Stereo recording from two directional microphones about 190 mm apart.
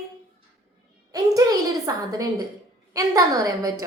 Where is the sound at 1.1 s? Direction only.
15° right (ahead or behind).